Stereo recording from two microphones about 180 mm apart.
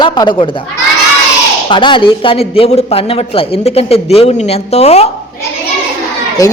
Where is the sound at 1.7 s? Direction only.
25° left (ahead or behind).